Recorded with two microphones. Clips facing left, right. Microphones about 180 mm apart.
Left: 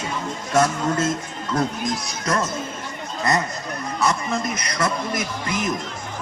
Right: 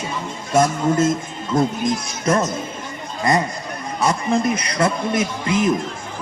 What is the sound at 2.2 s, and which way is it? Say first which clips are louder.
Speech: right 5 dB; 25° right (ahead or behind).